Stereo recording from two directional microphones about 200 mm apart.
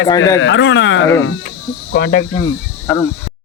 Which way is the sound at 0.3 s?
70° left (ahead or behind).